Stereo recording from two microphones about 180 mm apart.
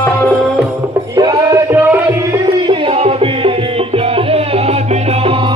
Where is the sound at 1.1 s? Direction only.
20° right (ahead or behind).